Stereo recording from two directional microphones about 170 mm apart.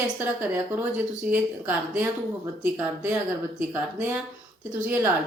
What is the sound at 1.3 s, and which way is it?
Speech, 10° right (ahead or behind).